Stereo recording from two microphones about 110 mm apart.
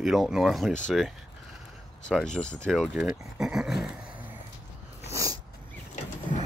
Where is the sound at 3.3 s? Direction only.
5° right (ahead or behind).